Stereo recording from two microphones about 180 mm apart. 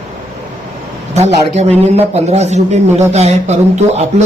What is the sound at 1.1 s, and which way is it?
A man's voice, 35° right (ahead or behind).